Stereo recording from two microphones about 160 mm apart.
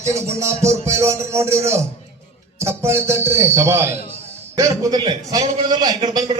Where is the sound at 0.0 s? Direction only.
20° right (ahead or behind).